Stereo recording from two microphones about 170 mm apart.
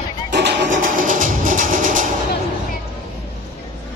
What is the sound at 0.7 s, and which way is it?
Music, 55° right (ahead or behind).